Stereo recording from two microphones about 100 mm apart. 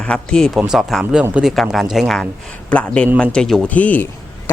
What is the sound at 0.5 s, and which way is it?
A man's voice, 5° right (ahead or behind).